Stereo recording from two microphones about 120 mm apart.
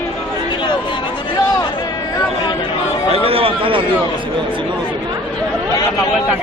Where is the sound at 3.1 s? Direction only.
55° right (ahead or behind).